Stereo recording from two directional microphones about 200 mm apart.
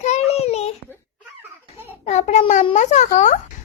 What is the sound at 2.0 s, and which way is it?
A child's voice, 35° left (ahead or behind).